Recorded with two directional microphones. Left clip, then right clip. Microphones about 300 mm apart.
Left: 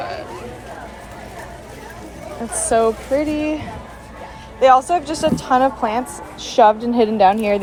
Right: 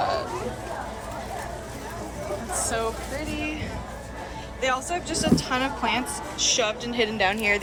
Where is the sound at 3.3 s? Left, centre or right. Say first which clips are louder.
Left 9 dB; centre.